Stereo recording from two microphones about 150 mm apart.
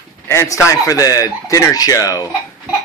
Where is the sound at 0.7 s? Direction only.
20° left (ahead or behind).